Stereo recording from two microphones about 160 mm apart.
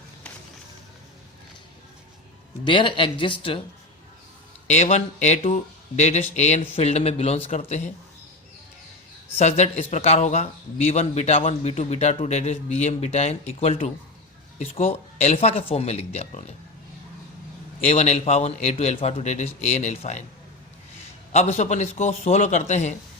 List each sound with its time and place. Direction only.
2.6 s a man's voice: 30° left (ahead or behind)
4.7 s a man's voice: 45° left (ahead or behind)
9.4 s a man's voice: 45° left (ahead or behind)
17.8 s a man's voice: 40° left (ahead or behind)
21.3 s a man's voice: 45° left (ahead or behind)